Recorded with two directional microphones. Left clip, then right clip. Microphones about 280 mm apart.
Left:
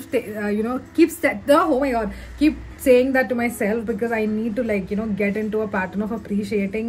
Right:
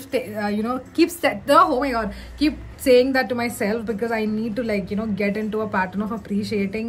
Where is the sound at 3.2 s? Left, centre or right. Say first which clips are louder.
Left 1 dB; centre.